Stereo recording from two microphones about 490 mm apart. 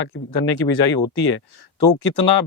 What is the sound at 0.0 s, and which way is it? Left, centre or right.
Speech, left.